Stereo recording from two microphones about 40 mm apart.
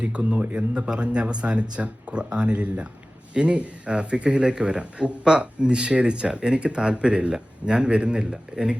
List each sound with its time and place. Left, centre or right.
0.0 s a man's voice: right